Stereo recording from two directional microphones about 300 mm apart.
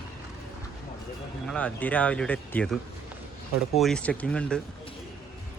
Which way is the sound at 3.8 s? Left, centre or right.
Centre.